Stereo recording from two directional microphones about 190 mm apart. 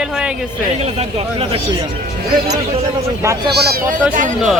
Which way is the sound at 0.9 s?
30° right (ahead or behind).